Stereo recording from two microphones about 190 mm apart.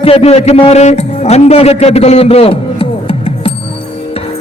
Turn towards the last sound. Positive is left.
turn(degrees=30)  # may be behind; listen again after turning